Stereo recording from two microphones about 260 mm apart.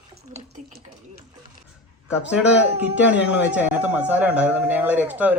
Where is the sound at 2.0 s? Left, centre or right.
Centre.